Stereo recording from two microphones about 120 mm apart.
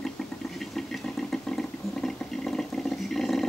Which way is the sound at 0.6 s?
5° left (ahead or behind).